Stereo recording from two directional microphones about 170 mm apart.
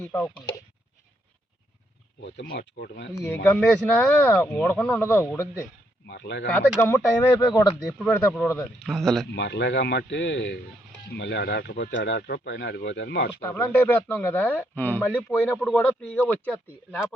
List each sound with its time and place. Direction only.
0.0 s speech: 10° left (ahead or behind)
2.2 s speech: 85° left; by 3.1 s 65° left (ahead or behind)
3.2 s speech: 10° left (ahead or behind)
6.1 s speech: 90° left
6.7 s speech: 15° left (ahead or behind)
7.9 s speech: 5° left (ahead or behind)
9.3 s speech: 90° left
12.9 s speech: 85° left
13.6 s speech: 10° left (ahead or behind)